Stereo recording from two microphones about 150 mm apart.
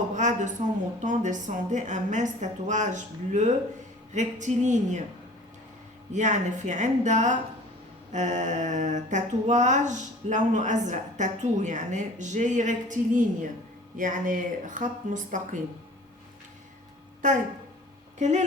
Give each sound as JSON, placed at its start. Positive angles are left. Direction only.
{"t": 0.2, "sound": "a woman's voice", "side_deg": -55}
{"t": 6.1, "sound": "speech", "side_deg": -55}
{"t": 17.2, "sound": "speech", "side_deg": -60}